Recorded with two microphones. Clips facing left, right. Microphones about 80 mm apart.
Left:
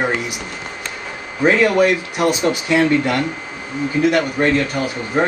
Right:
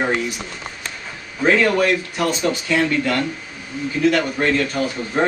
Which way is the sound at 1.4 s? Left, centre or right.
Centre.